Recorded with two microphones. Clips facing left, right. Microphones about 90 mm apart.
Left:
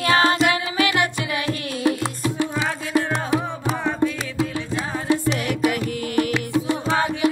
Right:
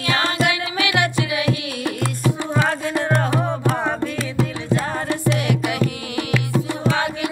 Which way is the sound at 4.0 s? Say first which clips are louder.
Even; 15° left (ahead or behind).